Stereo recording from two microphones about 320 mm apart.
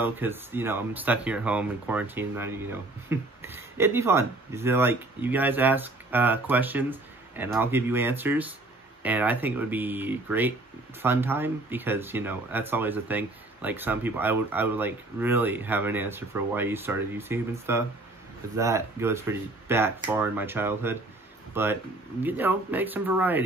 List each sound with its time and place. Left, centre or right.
0.0 s speech: centre